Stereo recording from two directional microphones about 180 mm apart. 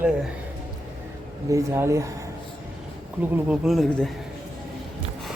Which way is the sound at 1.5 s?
15° right (ahead or behind).